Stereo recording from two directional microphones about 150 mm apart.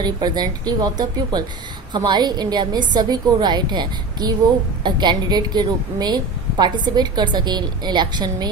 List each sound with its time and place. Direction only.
0.0 s a woman's voice: 25° right (ahead or behind)